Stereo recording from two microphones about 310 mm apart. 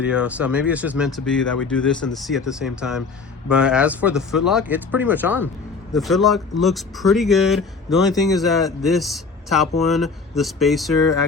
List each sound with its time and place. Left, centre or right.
0.0 s speech: centre